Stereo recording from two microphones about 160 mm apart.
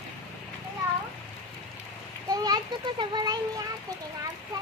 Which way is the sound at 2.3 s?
25° right (ahead or behind).